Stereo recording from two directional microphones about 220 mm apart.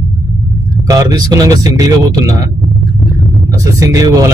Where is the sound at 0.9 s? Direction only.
15° right (ahead or behind).